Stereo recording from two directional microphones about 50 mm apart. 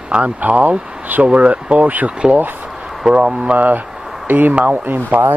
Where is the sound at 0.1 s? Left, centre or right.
Right.